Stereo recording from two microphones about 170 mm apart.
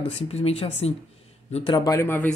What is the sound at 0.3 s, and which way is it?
Speech, 35° left (ahead or behind).